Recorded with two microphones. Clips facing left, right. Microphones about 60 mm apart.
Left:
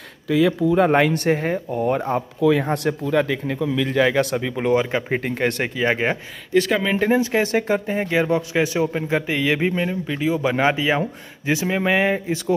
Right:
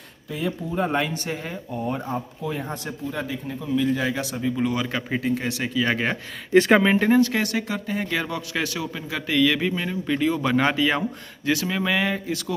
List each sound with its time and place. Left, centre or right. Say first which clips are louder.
0.3 s speech: left 11 dB; left
0.8 s speech: left 8 dB; left
4.7 s a man's voice: left 7 dB; left
5.1 s speech: left 2 dB; left
5.9 s a man's voice: left 6 dB; left
6.5 s speech: right 3 dB; right
7.2 s a man's voice: left 1 dB; centre
7.5 s a man's voice: left 6 dB; left
9.2 s a man's voice: even; left
10.0 s a man's voice: right 2 dB; centre